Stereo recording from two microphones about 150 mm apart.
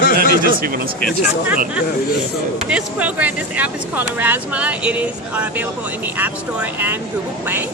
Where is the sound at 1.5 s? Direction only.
10° right (ahead or behind).